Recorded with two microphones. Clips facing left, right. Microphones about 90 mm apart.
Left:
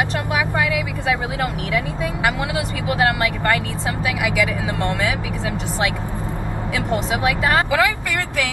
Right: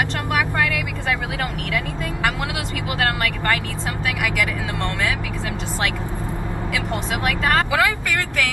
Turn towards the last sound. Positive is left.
turn(degrees=15)  # may be behind; listen again after turning